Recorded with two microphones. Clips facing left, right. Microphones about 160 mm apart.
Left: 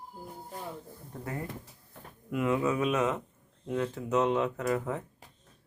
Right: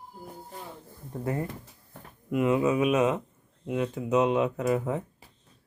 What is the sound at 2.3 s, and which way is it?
Speech, 20° right (ahead or behind).